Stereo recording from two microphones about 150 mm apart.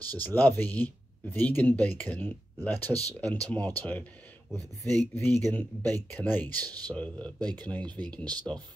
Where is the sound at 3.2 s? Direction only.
10° left (ahead or behind).